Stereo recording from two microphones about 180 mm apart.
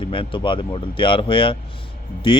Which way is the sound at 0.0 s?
30° left (ahead or behind).